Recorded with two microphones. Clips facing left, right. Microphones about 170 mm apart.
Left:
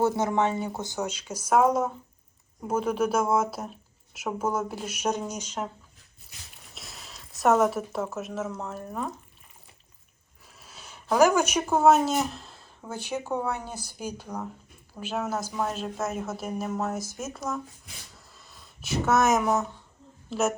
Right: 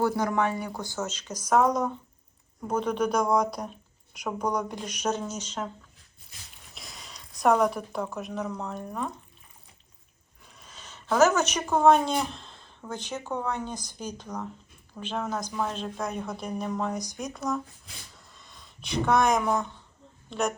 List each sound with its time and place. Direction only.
0.0 s speech: 25° left (ahead or behind)
6.7 s speech: centre (ahead or behind)
10.6 s speech: 10° left (ahead or behind)
18.1 s a sound: 5° left (ahead or behind)
20.3 s speech: 5° left (ahead or behind)